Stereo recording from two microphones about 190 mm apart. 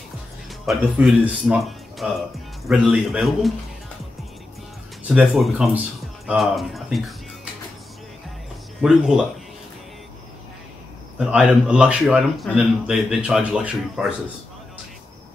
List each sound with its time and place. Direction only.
0.7 s speech: 5° right (ahead or behind)
5.0 s speech: 5° right (ahead or behind)
8.8 s speech: 5° right (ahead or behind)
11.1 s speech: 5° right (ahead or behind)